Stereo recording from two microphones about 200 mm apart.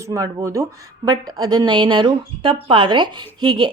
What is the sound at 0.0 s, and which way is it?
A woman's voice, 15° right (ahead or behind).